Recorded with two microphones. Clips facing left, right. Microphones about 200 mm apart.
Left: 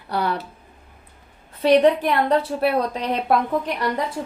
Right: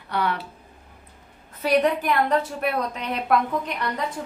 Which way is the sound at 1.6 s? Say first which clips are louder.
Left 5 dB; 30° left (ahead or behind).